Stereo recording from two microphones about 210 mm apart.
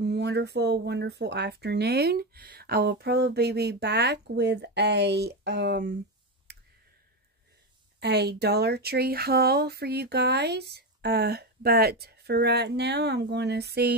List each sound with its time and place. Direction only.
0.0 s speech: 50° right (ahead or behind)
6.5 s clicking: 50° right (ahead or behind)
8.0 s speech: 50° right (ahead or behind)